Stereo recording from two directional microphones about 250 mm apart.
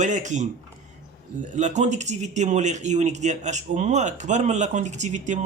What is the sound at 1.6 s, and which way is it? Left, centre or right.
Speech, right.